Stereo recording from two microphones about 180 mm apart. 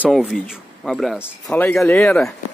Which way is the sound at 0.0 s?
Centre (ahead or behind).